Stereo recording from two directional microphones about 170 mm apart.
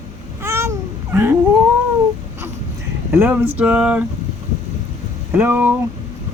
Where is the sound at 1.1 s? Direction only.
15° right (ahead or behind).